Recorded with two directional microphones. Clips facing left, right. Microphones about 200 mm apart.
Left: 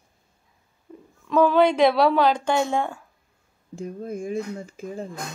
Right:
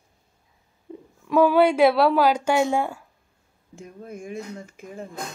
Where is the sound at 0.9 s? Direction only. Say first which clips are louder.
Right 5 dB; 20° right (ahead or behind).